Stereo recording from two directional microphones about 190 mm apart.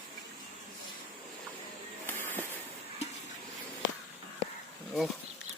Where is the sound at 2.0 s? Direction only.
10° left (ahead or behind).